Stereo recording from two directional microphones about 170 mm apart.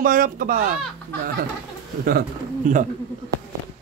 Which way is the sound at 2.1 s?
55° right (ahead or behind).